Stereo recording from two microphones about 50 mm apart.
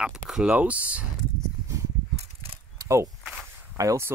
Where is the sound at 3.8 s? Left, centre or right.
Right.